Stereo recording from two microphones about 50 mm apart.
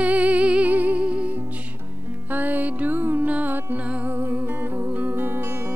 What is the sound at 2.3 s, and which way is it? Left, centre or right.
Music, right.